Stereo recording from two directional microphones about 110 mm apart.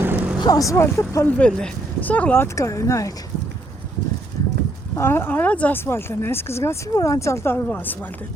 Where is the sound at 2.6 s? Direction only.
30° left (ahead or behind).